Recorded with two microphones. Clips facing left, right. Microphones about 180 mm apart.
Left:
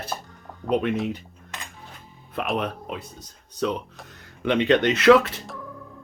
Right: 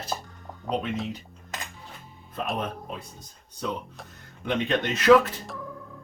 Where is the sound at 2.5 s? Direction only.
70° left (ahead or behind).